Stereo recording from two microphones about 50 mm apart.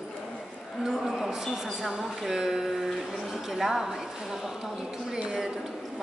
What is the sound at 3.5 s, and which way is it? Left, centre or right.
Speech, centre.